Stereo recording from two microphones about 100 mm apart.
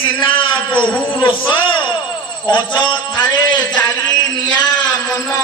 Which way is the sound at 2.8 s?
50° left (ahead or behind).